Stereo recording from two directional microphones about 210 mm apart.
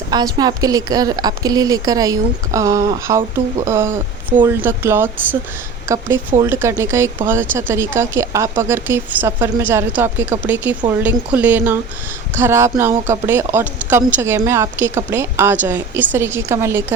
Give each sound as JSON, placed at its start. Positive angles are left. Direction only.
{"t": 0.1, "sound": "speech", "side_deg": -20}
{"t": 6.4, "sound": "speech", "side_deg": -10}